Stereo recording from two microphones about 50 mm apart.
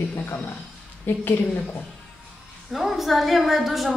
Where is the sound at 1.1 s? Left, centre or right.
Left.